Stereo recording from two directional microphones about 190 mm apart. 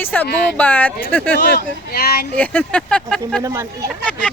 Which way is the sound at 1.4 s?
60° left (ahead or behind).